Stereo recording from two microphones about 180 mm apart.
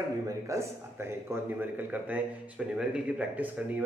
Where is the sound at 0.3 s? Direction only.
15° right (ahead or behind).